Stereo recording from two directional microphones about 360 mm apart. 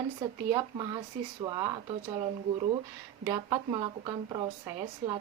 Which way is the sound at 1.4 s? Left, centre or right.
Centre.